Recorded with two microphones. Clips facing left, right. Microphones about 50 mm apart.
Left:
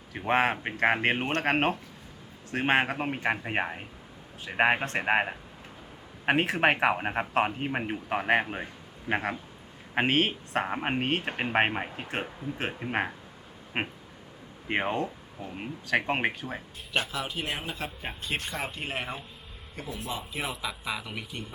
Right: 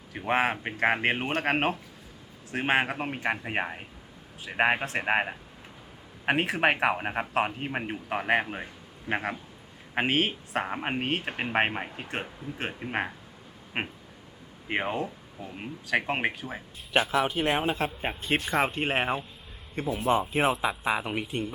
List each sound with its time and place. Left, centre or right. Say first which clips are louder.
0.1 s speech: left 1 dB; centre
17.1 s a man's voice: right 8 dB; right